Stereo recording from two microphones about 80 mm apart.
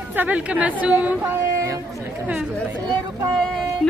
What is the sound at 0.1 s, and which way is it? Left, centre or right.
A woman's voice, right.